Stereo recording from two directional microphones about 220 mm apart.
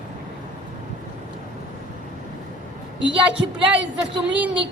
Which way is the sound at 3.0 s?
55° right (ahead or behind).